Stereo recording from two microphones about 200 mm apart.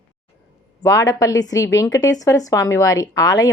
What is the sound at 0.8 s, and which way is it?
A woman's voice, 15° left (ahead or behind).